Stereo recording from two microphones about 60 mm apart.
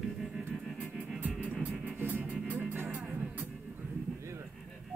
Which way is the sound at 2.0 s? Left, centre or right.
Right.